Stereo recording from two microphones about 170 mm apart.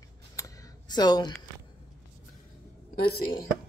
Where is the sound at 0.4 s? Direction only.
25° left (ahead or behind).